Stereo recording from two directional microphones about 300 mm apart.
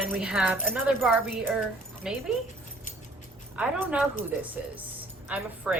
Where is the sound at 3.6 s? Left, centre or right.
Centre.